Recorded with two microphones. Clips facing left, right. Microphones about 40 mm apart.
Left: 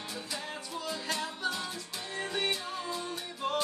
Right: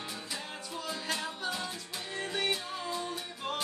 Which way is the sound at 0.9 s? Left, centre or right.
Centre.